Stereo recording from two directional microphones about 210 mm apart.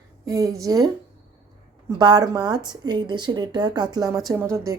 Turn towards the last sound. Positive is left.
turn(degrees=-15)  # may be behind; listen again after turning